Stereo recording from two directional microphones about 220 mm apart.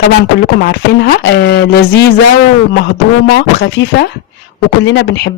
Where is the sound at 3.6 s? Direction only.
50° left (ahead or behind).